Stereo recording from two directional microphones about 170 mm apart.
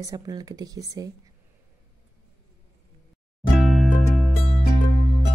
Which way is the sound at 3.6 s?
Centre (ahead or behind).